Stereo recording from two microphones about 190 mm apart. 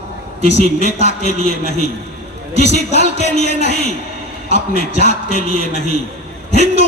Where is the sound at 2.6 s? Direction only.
35° left (ahead or behind).